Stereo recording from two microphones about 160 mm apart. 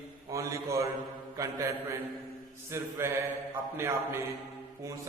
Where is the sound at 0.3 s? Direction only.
20° right (ahead or behind).